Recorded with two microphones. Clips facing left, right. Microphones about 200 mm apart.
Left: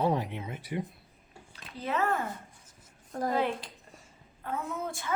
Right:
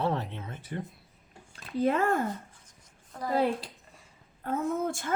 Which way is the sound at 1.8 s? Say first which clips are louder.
Right 4 dB; 45° right (ahead or behind).